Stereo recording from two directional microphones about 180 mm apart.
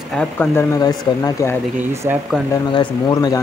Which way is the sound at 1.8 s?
10° right (ahead or behind).